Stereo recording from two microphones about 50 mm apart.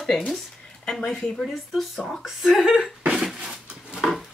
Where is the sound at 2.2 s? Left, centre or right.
Centre.